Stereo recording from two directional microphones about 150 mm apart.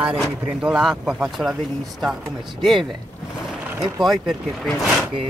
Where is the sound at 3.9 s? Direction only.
Centre (ahead or behind).